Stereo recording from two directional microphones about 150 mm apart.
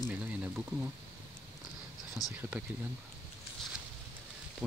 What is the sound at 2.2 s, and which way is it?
Speech, 25° left (ahead or behind).